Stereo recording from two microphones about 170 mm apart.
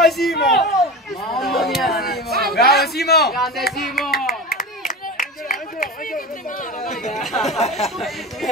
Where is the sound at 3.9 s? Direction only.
65° left (ahead or behind).